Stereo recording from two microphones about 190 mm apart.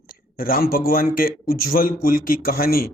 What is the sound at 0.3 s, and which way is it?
Speech, 50° left (ahead or behind).